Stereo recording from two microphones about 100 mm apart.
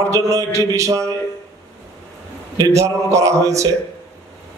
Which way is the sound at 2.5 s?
30° right (ahead or behind).